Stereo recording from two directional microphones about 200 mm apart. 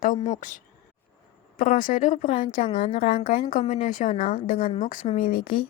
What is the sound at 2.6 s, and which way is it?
Speech, 25° left (ahead or behind).